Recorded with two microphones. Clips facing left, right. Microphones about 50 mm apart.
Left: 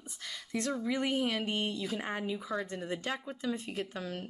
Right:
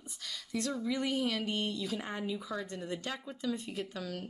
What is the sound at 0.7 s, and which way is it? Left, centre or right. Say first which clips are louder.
Speech: left 2 dB; left.